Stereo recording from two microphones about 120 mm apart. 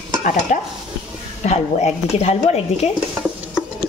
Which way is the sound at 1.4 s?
70° left (ahead or behind).